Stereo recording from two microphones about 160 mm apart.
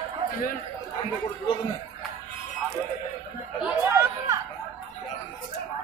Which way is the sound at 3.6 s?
15° right (ahead or behind).